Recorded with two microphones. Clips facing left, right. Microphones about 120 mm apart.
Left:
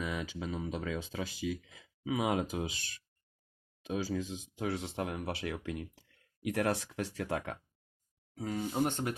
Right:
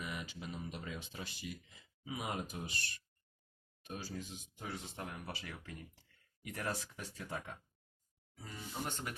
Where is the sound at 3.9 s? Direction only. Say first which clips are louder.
Left 10 dB; 90° left; by 8.6 s 75° left (ahead or behind).